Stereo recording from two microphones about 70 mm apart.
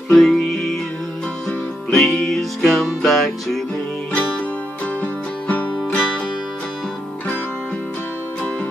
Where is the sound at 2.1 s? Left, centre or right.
Centre.